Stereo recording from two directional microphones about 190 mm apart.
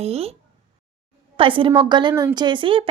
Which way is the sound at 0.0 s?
30° right (ahead or behind).